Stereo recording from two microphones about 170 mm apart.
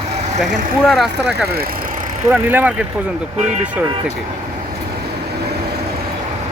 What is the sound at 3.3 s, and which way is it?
Speech, 45° right (ahead or behind).